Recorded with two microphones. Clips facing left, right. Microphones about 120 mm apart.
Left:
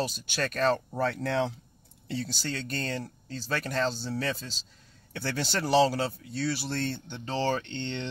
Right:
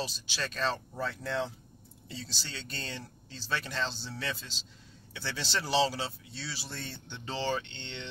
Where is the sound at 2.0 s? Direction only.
60° left (ahead or behind); by 4.5 s 40° left (ahead or behind).